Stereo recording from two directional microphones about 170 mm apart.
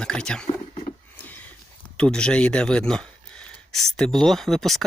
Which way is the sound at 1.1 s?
10° left (ahead or behind).